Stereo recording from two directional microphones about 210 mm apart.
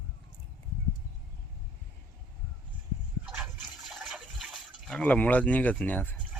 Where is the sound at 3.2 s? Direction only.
5° right (ahead or behind).